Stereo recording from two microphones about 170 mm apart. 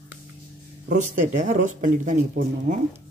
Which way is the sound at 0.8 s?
45° right (ahead or behind).